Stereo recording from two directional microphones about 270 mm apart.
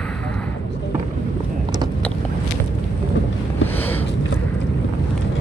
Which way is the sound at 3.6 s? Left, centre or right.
Centre.